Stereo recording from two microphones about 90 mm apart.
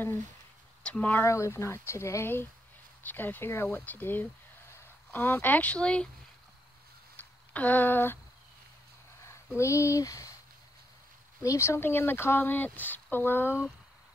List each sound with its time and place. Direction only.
0.8 s speech: 15° left (ahead or behind)
1.2 s speech: 35° left (ahead or behind); by 6.0 s 10° left (ahead or behind)
7.2 s speech: 20° left (ahead or behind)
9.6 s speech: 35° left (ahead or behind)
11.4 s speech: 30° left (ahead or behind)